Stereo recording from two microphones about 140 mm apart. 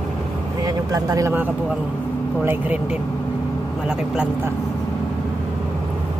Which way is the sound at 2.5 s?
10° right (ahead or behind).